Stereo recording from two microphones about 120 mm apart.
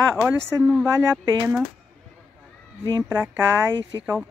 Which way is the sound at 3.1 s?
15° right (ahead or behind).